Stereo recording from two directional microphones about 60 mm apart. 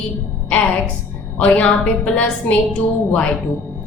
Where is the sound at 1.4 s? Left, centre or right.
Left.